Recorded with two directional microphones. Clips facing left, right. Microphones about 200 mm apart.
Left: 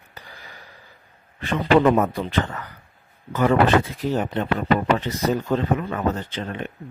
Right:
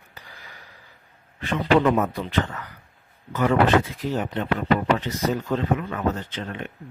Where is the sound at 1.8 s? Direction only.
40° left (ahead or behind).